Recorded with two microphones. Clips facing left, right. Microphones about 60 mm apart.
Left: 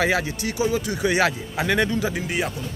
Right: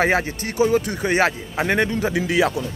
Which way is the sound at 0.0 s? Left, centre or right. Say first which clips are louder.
Right 2 dB; right.